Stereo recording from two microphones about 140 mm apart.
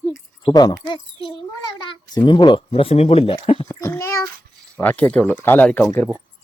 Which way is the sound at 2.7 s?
45° left (ahead or behind).